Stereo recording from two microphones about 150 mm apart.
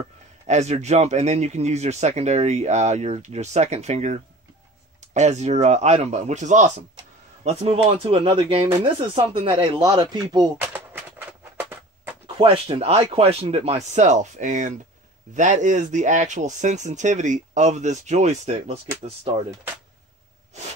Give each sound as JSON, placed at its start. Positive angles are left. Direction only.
{"t": 0.5, "sound": "speech", "side_deg": -50}
{"t": 7.4, "sound": "speech", "side_deg": -40}
{"t": 10.6, "sound": "a sound", "side_deg": -10}
{"t": 12.4, "sound": "speech", "side_deg": -35}